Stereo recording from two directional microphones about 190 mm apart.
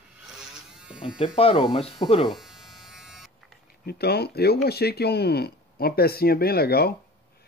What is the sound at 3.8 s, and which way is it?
Speech, 55° left (ahead or behind).